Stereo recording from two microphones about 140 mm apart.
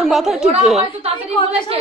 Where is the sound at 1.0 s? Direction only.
50° right (ahead or behind).